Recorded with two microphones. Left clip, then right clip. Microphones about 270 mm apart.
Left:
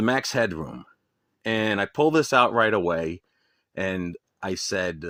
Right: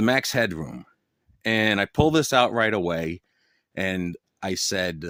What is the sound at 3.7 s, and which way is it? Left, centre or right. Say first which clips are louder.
Speech: right 1 dB; right.